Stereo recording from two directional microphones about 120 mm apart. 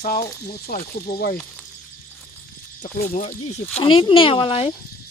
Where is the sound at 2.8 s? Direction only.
85° left.